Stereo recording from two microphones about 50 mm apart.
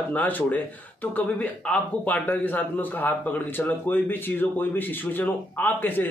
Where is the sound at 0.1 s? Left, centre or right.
Left.